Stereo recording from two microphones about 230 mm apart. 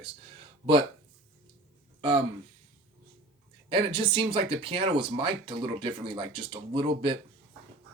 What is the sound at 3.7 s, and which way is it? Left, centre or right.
Speech, right.